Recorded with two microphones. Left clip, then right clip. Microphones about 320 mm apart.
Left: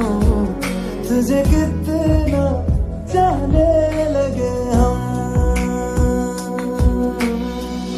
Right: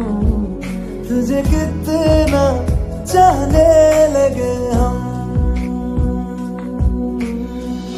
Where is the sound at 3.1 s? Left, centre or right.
Right.